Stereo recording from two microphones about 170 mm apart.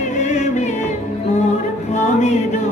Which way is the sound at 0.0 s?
45° left (ahead or behind).